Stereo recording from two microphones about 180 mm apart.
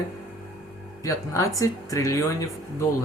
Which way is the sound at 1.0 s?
15° left (ahead or behind).